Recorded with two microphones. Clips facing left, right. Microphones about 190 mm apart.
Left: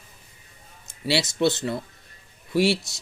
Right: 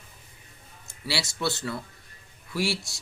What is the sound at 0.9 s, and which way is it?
Speech, 20° left (ahead or behind).